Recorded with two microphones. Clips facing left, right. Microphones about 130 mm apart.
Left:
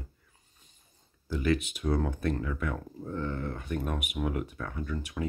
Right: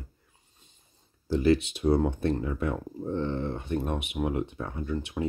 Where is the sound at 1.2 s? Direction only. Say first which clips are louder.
Right 5 dB; 30° right (ahead or behind).